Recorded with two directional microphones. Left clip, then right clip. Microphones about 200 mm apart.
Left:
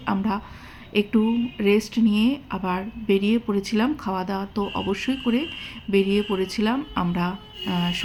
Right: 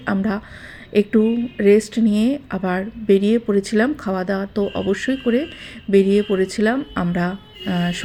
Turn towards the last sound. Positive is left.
turn(degrees=-15)  # may be behind; listen again after turning